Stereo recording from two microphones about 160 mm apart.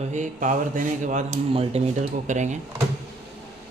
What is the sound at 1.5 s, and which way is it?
A man's voice, 40° right (ahead or behind).